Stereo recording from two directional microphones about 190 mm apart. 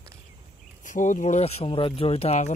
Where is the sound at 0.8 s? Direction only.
40° left (ahead or behind).